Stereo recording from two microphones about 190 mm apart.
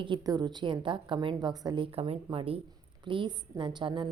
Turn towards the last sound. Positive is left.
turn(degrees=-25)  # may be behind; listen again after turning